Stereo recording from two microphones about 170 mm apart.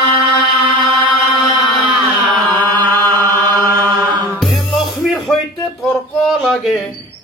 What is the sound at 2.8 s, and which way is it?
Chant, 15° left (ahead or behind).